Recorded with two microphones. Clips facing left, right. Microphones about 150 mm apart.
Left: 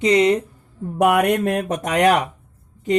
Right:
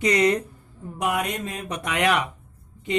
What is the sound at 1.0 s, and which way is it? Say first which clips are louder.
Speech: left 10 dB; 60° left (ahead or behind).